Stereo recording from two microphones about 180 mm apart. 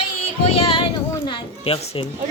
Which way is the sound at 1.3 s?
30° left (ahead or behind).